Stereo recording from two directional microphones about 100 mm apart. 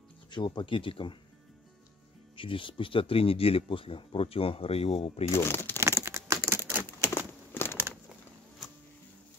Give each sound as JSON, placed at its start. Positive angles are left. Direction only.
{"t": 0.3, "sound": "speech", "side_deg": 50}
{"t": 2.3, "sound": "speech", "side_deg": 60}
{"t": 5.3, "sound": "speech", "side_deg": 25}
{"t": 5.8, "sound": "computer keyboard", "side_deg": -25}
{"t": 7.0, "sound": "a sound", "side_deg": 25}